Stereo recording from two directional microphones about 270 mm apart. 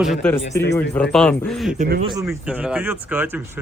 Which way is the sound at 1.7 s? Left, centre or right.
Right.